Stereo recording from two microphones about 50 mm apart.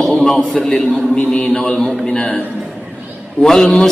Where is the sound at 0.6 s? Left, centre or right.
Centre.